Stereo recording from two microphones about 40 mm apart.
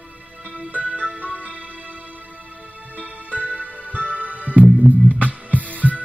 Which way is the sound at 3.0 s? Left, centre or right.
Right.